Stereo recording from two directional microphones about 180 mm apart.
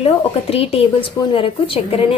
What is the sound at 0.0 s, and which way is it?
A woman's voice, 35° left (ahead or behind).